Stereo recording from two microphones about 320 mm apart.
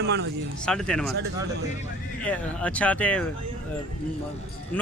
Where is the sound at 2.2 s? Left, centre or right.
Centre.